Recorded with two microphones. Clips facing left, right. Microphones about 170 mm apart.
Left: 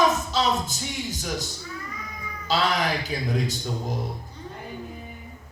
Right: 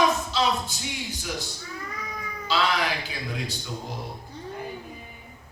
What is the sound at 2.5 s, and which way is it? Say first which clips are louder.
Speech: left 2 dB; 45° left (ahead or behind).